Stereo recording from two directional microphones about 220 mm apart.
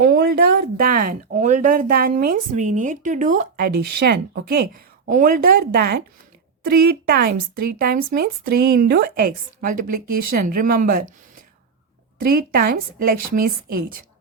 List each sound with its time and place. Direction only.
0.0 s speech: 40° right (ahead or behind)
12.2 s speech: 40° right (ahead or behind)